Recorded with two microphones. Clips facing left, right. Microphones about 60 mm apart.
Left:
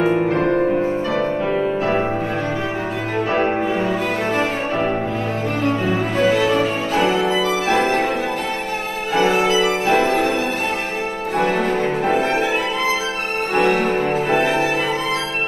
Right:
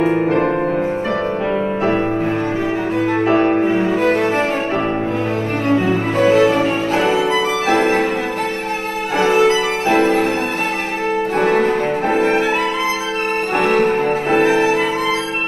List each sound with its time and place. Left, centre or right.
0.3 s music: centre
5.9 s music: right
7.0 s music: centre
7.6 s music: right
9.3 s music: right
11.3 s music: right
13.6 s music: right